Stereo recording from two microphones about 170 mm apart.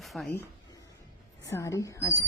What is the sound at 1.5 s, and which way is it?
Speech, 15° left (ahead or behind).